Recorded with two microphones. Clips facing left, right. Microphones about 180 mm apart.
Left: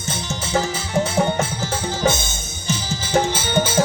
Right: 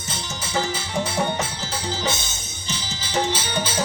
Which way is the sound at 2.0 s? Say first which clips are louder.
Left 7 dB; 50° left (ahead or behind).